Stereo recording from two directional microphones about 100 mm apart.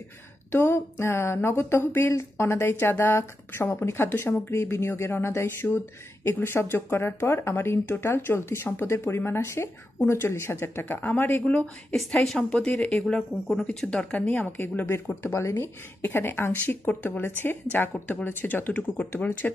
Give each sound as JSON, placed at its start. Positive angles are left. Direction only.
{"t": 0.5, "sound": "speech", "side_deg": 25}
{"t": 13.0, "sound": "speech", "side_deg": 5}